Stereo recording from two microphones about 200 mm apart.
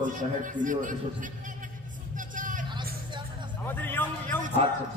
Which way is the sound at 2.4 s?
40° right (ahead or behind).